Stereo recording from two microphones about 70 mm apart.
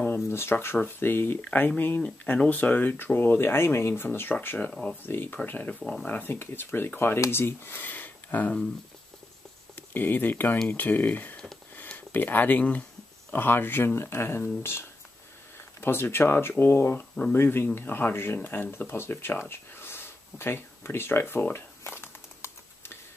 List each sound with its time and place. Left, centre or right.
0.0 s speech: left
1.4 s speech: left
4.6 s speech: centre
5.0 s speech: left
5.8 s speech: centre
6.0 s speech: left
9.8 s speech: left
19.5 s a sound: left